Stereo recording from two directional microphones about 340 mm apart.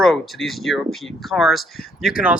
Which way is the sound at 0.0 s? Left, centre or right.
Centre.